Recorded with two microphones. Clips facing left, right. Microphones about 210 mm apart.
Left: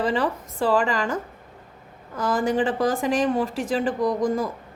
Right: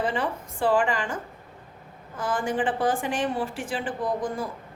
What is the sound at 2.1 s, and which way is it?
A woman's voice, 40° left (ahead or behind).